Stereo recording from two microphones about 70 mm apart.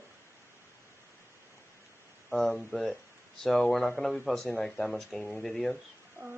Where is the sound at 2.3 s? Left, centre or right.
Centre.